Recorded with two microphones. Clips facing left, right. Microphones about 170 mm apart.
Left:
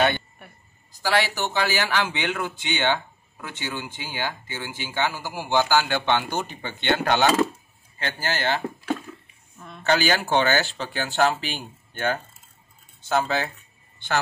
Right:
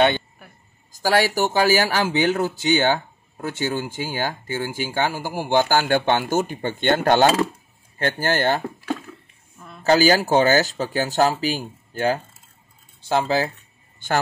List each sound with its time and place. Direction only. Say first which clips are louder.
0.4 s a sound: even; centre (ahead or behind)
1.0 s speech: right 5 dB; 45° right (ahead or behind)
9.8 s speech: right 6 dB; 35° right (ahead or behind)
13.9 s speech: right 3 dB; 45° right (ahead or behind)